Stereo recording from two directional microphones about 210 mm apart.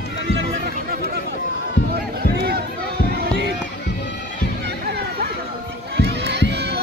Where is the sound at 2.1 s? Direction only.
50° right (ahead or behind).